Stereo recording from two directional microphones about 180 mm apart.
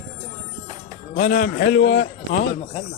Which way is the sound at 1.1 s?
50° left (ahead or behind).